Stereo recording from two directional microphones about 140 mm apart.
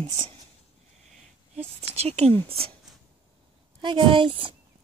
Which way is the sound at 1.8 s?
50° right (ahead or behind).